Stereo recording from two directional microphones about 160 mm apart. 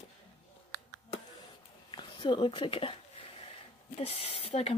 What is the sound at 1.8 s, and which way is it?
Speech, 30° left (ahead or behind).